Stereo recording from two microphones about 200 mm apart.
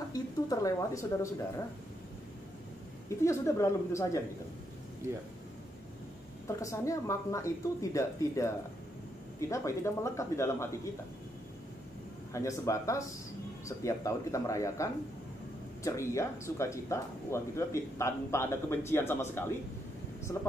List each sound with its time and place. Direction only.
0.1 s a sound: 15° left (ahead or behind)
3.2 s speech: 15° left (ahead or behind)
6.4 s speech: 15° left (ahead or behind)
12.3 s speech: 15° left (ahead or behind)